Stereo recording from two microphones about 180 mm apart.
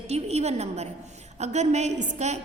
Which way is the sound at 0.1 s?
35° right (ahead or behind).